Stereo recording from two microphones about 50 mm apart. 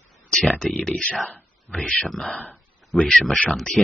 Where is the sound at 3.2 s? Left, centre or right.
Centre.